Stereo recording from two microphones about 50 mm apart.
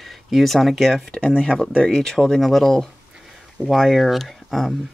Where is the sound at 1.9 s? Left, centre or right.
Centre.